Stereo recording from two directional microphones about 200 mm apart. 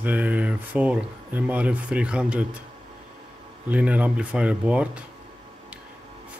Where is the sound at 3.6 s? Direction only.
5° right (ahead or behind).